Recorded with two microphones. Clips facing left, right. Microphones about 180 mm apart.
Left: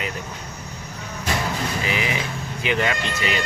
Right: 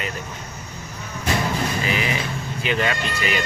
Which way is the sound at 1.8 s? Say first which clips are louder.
Right 1 dB; 15° left (ahead or behind).